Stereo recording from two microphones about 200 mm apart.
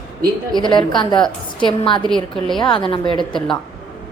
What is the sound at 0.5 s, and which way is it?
A woman's voice, 25° left (ahead or behind).